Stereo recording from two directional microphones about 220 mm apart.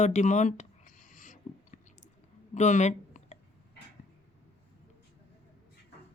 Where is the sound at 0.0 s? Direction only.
30° left (ahead or behind).